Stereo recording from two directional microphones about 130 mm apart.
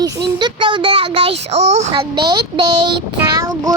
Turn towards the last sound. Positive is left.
turn(degrees=-25)  # may be behind; listen again after turning